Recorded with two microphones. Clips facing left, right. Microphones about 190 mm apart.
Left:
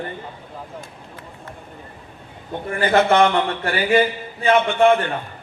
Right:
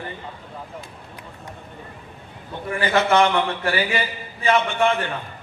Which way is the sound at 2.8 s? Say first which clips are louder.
Left 3 dB; 55° left (ahead or behind).